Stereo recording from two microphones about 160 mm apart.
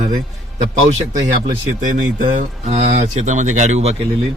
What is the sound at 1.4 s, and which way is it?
Speech, 55° right (ahead or behind).